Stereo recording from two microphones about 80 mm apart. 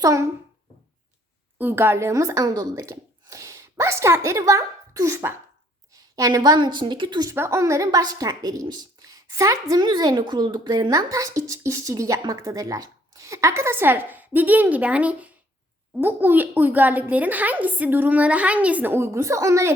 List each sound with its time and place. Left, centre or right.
0.0 s a woman's voice: right
1.5 s a woman's voice: right
7.3 s a woman's voice: right
7.9 s a woman's voice: right
9.8 s a woman's voice: right